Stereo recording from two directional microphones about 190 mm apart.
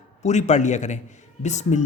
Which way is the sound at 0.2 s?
35° left (ahead or behind).